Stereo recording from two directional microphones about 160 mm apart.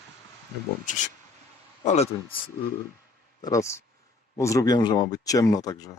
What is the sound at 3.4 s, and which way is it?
Speech, 20° left (ahead or behind).